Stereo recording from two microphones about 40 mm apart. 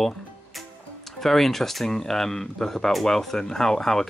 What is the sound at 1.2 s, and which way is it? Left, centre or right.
Speech, centre.